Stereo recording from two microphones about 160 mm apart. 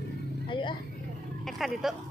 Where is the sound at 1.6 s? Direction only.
Centre (ahead or behind).